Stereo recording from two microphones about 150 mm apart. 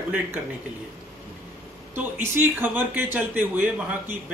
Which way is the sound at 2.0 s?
15° right (ahead or behind).